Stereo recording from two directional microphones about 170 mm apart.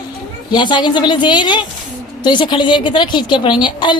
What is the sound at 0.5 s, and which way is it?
A woman's voice, 25° left (ahead or behind).